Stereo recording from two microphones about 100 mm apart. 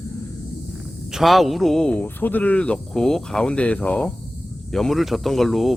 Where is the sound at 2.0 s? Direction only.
20° left (ahead or behind).